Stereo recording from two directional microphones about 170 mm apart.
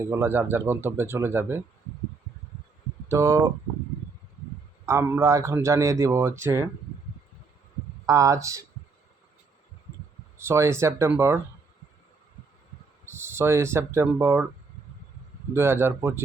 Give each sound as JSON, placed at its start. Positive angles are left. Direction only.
{"t": 0.0, "sound": "speech", "side_deg": -15}
{"t": 3.1, "sound": "speech", "side_deg": -20}
{"t": 4.9, "sound": "speech", "side_deg": -15}
{"t": 8.0, "sound": "speech", "side_deg": -20}
{"t": 10.3, "sound": "speech", "side_deg": -15}
{"t": 13.1, "sound": "speech", "side_deg": -15}
{"t": 15.5, "sound": "speech", "side_deg": -15}